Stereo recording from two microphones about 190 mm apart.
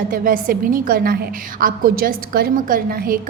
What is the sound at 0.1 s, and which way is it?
A woman's voice, 45° right (ahead or behind).